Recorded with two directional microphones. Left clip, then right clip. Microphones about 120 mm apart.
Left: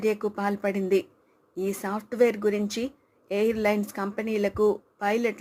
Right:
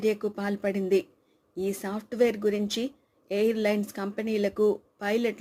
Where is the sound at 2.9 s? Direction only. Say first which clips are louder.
Left 1 dB; 15° right (ahead or behind).